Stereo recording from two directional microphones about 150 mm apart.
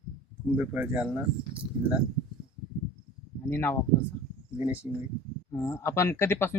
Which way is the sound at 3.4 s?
15° left (ahead or behind).